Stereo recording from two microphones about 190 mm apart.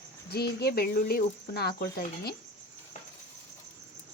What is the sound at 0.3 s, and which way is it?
Speech, 55° left (ahead or behind).